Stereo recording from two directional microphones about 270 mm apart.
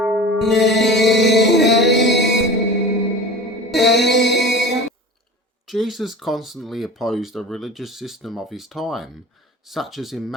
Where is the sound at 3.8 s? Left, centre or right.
Left.